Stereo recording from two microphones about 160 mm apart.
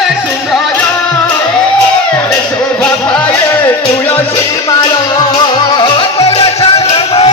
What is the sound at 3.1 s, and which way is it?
Music, 10° left (ahead or behind).